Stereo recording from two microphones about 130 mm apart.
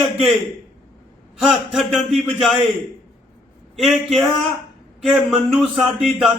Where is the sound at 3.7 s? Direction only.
Centre (ahead or behind).